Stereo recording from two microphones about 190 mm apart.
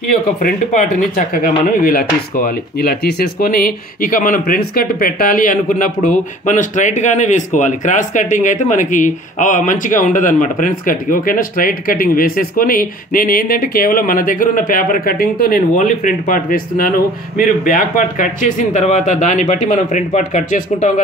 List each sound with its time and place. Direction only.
0.4 s speech: 50° left (ahead or behind)